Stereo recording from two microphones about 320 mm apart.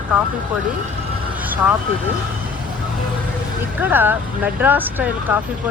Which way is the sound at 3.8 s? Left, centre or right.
Centre.